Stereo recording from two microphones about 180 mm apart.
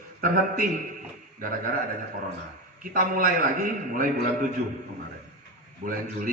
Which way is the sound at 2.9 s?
50° right (ahead or behind).